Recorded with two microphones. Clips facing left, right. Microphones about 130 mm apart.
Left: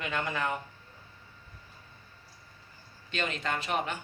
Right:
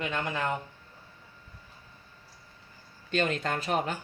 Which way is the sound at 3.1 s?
45° right (ahead or behind).